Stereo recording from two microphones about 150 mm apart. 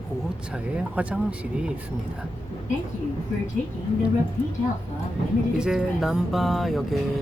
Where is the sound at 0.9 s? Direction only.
10° right (ahead or behind).